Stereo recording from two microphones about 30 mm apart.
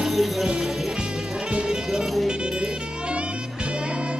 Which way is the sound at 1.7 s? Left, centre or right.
Right.